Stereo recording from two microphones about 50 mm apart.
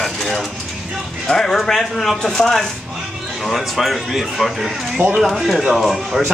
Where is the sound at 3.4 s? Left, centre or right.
Centre.